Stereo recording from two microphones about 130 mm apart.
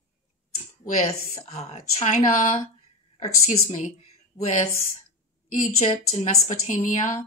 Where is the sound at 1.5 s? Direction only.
55° left (ahead or behind).